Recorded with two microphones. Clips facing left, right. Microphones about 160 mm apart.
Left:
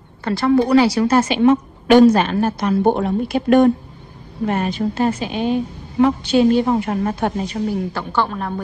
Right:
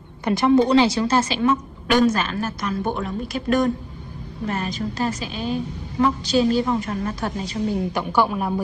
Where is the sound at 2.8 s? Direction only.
55° left (ahead or behind).